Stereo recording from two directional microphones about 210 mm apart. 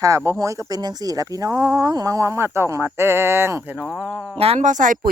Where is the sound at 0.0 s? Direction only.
15° right (ahead or behind).